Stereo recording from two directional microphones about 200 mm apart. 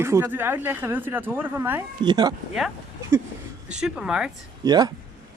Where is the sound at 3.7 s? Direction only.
5° right (ahead or behind).